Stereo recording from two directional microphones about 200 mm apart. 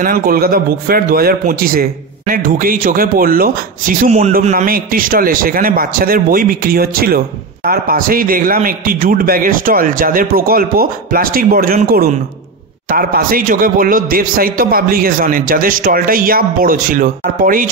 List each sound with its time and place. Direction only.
0.0 s speech: 45° right (ahead or behind)